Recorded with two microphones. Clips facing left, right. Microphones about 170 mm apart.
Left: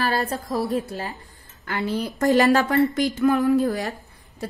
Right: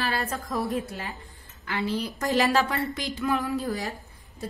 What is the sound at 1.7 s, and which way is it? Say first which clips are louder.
A woman's voice: left 3 dB; 50° left (ahead or behind).